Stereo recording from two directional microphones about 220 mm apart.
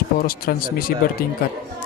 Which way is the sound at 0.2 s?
40° left (ahead or behind).